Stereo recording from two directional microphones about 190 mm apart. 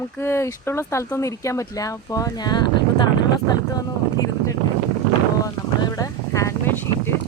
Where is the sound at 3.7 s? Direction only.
20° left (ahead or behind).